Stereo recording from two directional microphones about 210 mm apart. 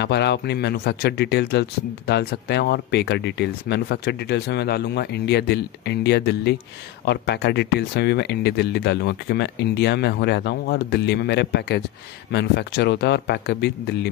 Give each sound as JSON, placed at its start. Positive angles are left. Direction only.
{"t": 0.0, "sound": "speech", "side_deg": 55}